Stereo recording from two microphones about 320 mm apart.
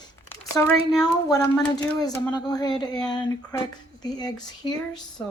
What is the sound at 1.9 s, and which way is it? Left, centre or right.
Speech, centre.